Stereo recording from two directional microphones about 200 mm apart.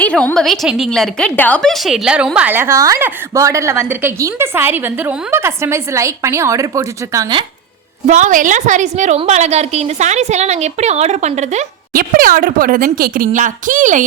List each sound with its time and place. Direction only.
0.0 s a woman's voice: 5° left (ahead or behind); by 7.4 s 20° right (ahead or behind)
8.0 s a woman's voice: 40° right (ahead or behind)